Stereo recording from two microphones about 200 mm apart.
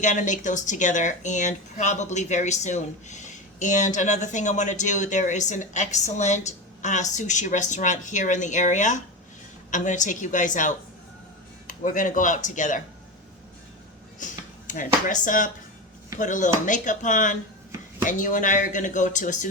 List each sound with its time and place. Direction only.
0.0 s speech: 40° left (ahead or behind)
11.8 s speech: 40° left (ahead or behind)
14.7 s speech: 40° left (ahead or behind)